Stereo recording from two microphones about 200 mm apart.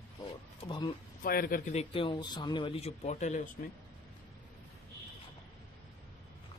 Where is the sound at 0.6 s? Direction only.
20° left (ahead or behind).